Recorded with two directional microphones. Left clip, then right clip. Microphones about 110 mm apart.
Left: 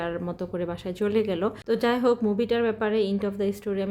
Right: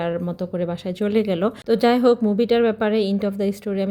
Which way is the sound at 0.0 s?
35° right (ahead or behind).